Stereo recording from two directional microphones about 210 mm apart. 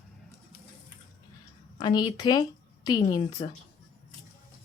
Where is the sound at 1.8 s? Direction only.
20° left (ahead or behind).